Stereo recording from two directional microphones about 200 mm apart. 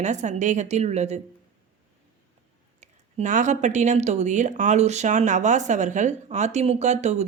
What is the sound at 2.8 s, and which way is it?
Speech, 35° right (ahead or behind).